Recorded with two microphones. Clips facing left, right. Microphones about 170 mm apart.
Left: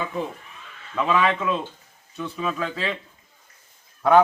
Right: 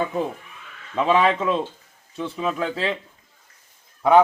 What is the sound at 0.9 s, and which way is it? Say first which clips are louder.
A man's voice: right 3 dB; 30° right (ahead or behind).